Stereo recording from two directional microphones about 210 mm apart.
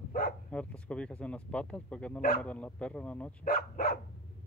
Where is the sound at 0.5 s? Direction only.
5° left (ahead or behind).